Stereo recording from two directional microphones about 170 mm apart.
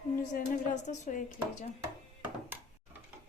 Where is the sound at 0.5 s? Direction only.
45° left (ahead or behind).